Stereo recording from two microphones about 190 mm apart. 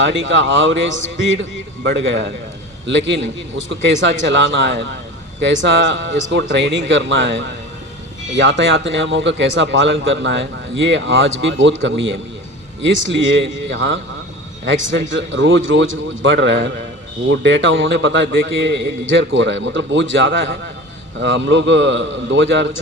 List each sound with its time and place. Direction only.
0.0 s a man's voice: 70° right (ahead or behind)